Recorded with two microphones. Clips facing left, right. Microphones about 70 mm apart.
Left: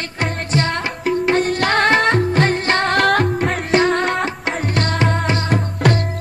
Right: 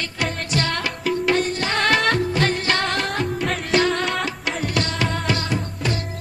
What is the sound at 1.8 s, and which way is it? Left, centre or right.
Music, left.